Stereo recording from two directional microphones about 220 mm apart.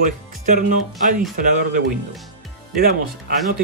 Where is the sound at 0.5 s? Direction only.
35° right (ahead or behind).